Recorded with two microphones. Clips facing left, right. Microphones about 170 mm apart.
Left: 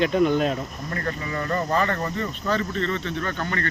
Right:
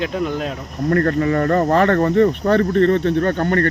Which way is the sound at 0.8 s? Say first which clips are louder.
Right 17 dB; 60° right (ahead or behind).